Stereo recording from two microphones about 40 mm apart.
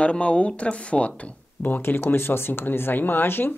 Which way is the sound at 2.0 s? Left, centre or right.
Left.